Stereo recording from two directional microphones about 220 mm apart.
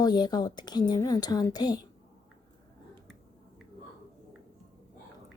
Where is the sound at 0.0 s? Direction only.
20° left (ahead or behind).